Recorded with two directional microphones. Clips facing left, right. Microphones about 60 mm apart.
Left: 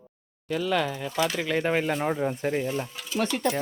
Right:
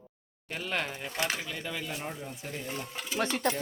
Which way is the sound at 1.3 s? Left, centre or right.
Left.